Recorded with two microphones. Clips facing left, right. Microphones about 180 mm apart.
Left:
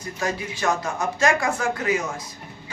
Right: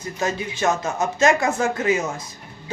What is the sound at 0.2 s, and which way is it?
Speech, 25° right (ahead or behind).